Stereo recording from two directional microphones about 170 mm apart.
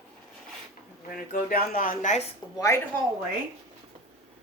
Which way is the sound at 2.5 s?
20° left (ahead or behind).